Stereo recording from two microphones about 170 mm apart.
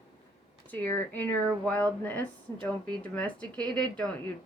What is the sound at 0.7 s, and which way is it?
Speech, 10° left (ahead or behind).